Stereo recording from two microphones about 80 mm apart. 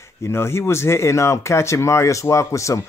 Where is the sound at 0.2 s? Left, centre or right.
Left.